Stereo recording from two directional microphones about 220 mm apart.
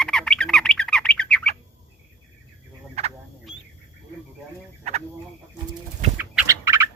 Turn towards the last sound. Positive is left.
turn(degrees=-15)  # may be behind; listen again after turning